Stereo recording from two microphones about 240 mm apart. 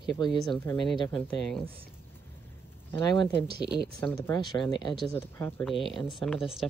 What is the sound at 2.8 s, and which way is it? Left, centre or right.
Speech, centre.